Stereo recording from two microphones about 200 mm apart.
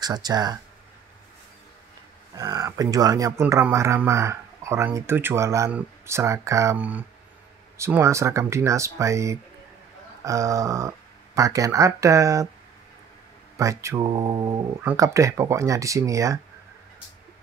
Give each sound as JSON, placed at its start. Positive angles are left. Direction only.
{"t": 0.0, "sound": "speech", "side_deg": -20}
{"t": 2.3, "sound": "speech", "side_deg": -20}
{"t": 13.6, "sound": "speech", "side_deg": -15}